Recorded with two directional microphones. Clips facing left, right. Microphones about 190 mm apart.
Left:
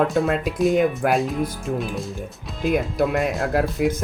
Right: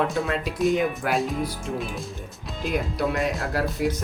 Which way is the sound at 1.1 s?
Centre (ahead or behind).